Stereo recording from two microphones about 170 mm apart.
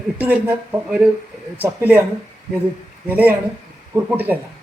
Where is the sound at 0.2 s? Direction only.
10° right (ahead or behind).